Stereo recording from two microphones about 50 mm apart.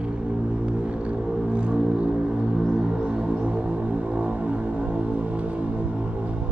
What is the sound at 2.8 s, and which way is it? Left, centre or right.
Music, right.